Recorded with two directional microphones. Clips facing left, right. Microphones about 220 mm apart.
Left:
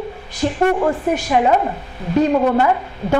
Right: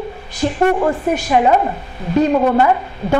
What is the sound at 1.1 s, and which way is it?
A woman's voice, 15° right (ahead or behind).